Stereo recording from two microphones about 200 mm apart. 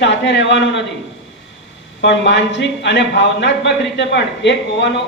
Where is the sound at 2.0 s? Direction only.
60° left (ahead or behind).